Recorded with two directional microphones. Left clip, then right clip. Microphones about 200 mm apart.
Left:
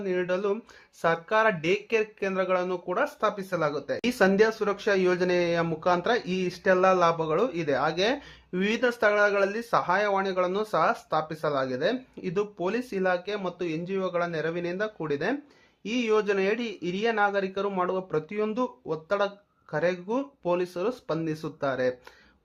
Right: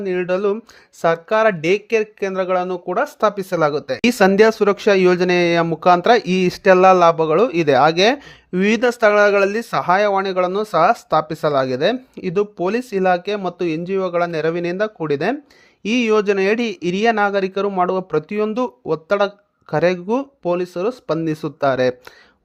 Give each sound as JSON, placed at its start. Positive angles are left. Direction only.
{"t": 0.0, "sound": "speech", "side_deg": -35}